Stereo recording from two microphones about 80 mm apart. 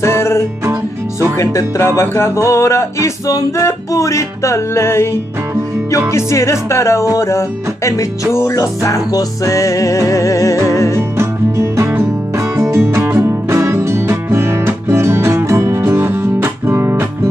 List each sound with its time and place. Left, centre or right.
0.0 s music: left
1.4 s speech: left
6.1 s speech: left
11.0 s music: right